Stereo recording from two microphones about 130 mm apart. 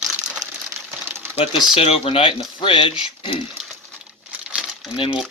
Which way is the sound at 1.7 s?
50° left (ahead or behind).